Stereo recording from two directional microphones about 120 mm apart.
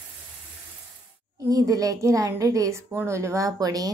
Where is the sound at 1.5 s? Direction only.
30° right (ahead or behind).